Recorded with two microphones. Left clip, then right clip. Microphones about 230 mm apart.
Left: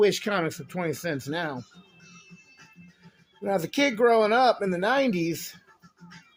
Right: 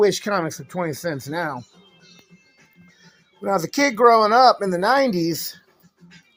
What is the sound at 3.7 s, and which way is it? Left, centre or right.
Speech, right.